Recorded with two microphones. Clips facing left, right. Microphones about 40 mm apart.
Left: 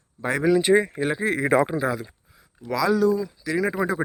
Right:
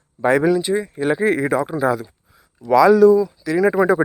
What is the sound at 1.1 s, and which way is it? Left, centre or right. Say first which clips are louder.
Speech: right 9 dB; right.